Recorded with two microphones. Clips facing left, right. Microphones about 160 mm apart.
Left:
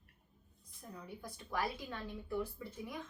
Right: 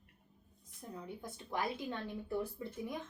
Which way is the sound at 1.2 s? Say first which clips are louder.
Even; 20° right (ahead or behind).